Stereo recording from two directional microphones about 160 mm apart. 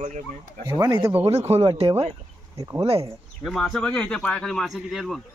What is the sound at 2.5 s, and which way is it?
Speech, 25° right (ahead or behind).